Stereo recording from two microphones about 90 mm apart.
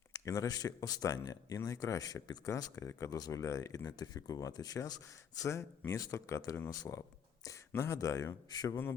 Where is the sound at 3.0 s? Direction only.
45° left (ahead or behind).